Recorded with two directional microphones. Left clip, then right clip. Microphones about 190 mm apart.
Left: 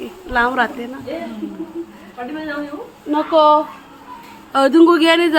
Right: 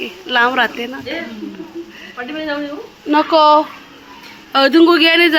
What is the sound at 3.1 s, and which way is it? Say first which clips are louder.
Speech: right 2 dB; 15° right (ahead or behind).